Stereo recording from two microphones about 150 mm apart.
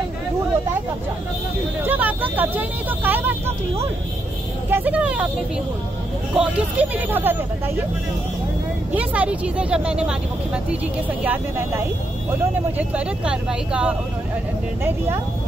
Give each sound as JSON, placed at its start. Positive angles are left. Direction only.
{"t": 1.9, "sound": "speech", "side_deg": -10}
{"t": 4.6, "sound": "speech", "side_deg": -10}
{"t": 6.3, "sound": "speech", "side_deg": -10}
{"t": 8.9, "sound": "speech", "side_deg": -10}